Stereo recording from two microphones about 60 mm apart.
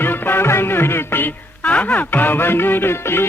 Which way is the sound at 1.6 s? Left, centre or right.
Left.